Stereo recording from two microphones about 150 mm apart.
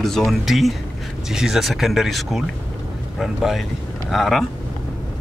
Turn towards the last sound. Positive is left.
turn(degrees=0)  # may be behind; listen again after turning